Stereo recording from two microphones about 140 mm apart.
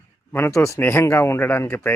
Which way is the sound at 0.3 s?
20° left (ahead or behind).